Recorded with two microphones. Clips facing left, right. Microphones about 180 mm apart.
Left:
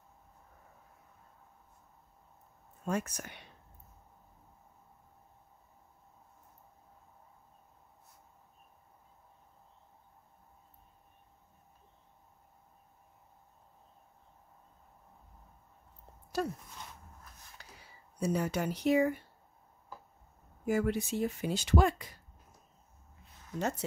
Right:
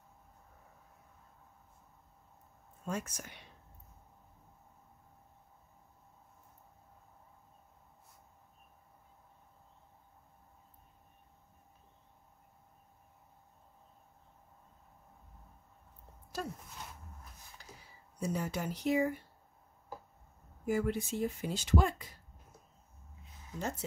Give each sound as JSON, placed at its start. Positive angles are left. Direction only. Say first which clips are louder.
{"t": 2.8, "sound": "speech", "louder": "left 4 dB", "side_deg": 65}
{"t": 16.4, "sound": "a sound", "louder": "left 6 dB", "side_deg": 70}
{"t": 18.2, "sound": "speech", "louder": "left 4 dB", "side_deg": 70}
{"t": 20.6, "sound": "speech", "louder": "left 2 dB", "side_deg": 70}